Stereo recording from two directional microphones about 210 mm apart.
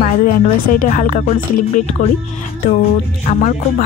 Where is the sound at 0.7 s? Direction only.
40° left (ahead or behind).